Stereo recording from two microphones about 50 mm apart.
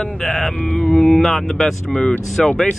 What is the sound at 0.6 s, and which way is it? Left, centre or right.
Mantra, left.